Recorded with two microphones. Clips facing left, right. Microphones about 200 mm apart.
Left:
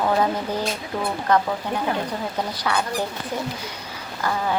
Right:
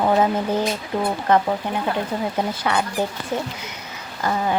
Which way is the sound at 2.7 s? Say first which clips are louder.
Right 1 dB; 20° right (ahead or behind).